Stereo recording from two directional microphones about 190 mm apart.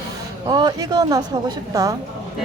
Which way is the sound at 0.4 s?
20° right (ahead or behind).